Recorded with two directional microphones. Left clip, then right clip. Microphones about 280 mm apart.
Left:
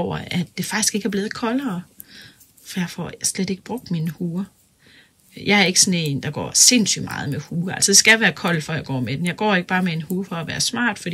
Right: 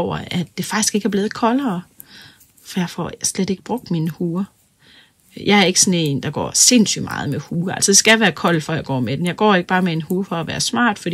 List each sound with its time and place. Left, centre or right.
0.0 s speech: centre